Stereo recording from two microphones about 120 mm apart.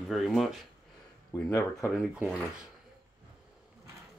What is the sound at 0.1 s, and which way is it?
Speech, centre (ahead or behind).